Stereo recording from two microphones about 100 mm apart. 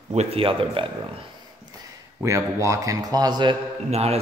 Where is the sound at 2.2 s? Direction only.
30° right (ahead or behind); by 3.6 s 45° right (ahead or behind).